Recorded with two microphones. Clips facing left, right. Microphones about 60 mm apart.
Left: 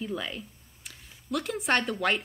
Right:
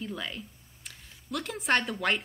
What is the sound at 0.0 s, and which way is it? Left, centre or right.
A woman's voice, centre.